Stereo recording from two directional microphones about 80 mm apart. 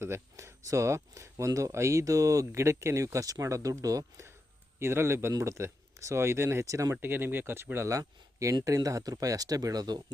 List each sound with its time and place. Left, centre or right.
0.0 s speech: right
7.0 s speech: right